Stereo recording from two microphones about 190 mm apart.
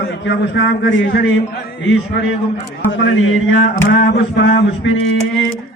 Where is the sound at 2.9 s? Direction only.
75° left (ahead or behind).